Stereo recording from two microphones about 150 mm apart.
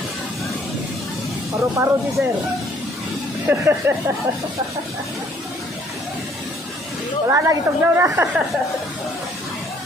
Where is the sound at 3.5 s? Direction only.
15° right (ahead or behind).